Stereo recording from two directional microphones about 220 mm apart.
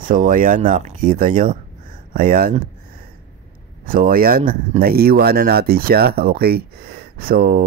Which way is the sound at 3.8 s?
40° right (ahead or behind).